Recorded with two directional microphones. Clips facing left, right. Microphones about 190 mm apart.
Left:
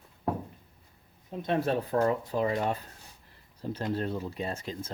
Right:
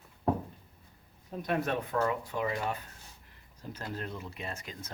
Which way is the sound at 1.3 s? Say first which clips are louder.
Left 3 dB; 25° left (ahead or behind).